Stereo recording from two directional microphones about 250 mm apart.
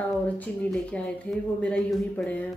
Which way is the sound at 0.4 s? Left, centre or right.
Centre.